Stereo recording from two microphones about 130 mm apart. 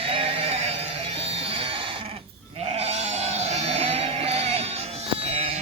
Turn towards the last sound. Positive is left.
turn(degrees=-50)  # may be behind; listen again after turning